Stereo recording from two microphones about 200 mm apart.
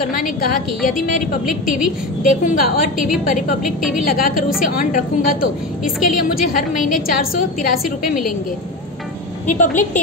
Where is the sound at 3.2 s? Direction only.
40° left (ahead or behind).